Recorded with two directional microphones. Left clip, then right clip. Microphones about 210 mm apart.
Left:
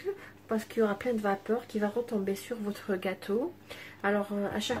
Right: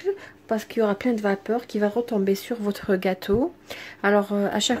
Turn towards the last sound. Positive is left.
turn(degrees=-45)  # may be behind; listen again after turning